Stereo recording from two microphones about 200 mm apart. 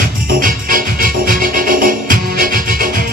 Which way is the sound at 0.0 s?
45° right (ahead or behind).